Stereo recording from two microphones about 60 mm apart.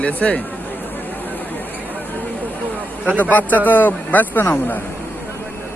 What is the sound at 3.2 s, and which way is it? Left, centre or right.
Speech, left.